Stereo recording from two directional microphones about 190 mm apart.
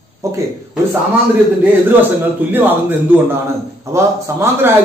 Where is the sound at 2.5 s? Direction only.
10° right (ahead or behind).